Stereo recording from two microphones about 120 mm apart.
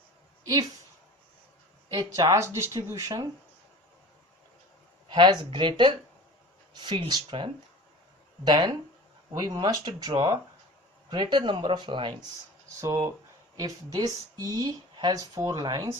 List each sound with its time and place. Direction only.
1.9 s speech: 35° right (ahead or behind)
5.0 s speech: 40° right (ahead or behind)
12.8 s speech: 30° right (ahead or behind)